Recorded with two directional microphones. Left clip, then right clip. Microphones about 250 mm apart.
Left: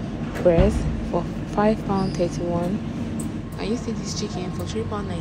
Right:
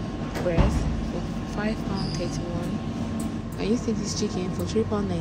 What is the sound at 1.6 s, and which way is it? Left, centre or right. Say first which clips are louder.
Speech: left 10 dB; centre.